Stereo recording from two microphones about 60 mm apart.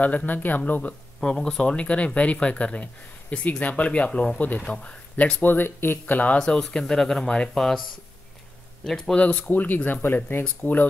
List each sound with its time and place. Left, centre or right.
0.0 s speech: left
1.2 s speech: centre
5.5 s speech: left
6.1 s speech: left
6.4 s speech: centre
8.8 s speech: centre
9.5 s speech: left